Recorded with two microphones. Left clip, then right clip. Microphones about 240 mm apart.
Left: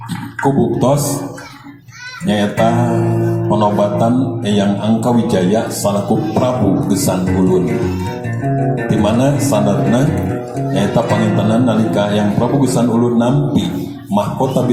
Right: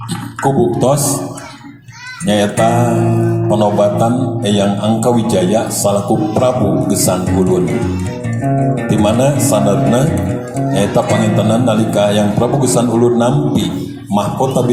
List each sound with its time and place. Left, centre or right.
0.4 s speech: right
2.2 s a man's voice: right
8.7 s a man's voice: right